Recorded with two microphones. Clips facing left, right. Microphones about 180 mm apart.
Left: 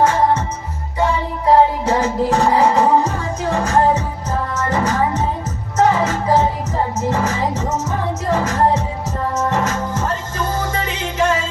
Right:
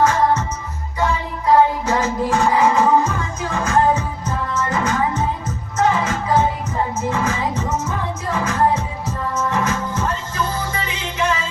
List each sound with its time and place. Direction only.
0.0 s music: 30° left (ahead or behind)
1.5 s music: 30° left (ahead or behind)